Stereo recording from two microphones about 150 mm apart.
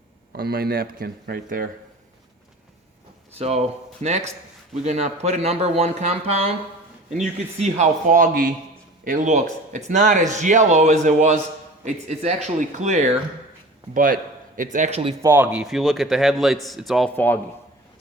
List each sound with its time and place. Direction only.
0.3 s speech: 85° right
3.3 s speech: 45° right (ahead or behind)
7.6 s speech: 50° right (ahead or behind); by 8.5 s 70° right (ahead or behind)
9.0 s speech: 55° right (ahead or behind)
13.9 s a man's voice: 65° right (ahead or behind); by 15.1 s 45° right (ahead or behind)
15.2 s speech: 15° right (ahead or behind)
15.6 s a man's voice: centre (ahead or behind)
17.2 s a man's voice: 15° left (ahead or behind)